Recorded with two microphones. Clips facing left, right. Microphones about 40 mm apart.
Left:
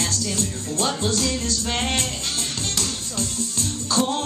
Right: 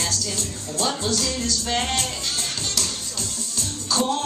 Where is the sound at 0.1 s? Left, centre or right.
Left.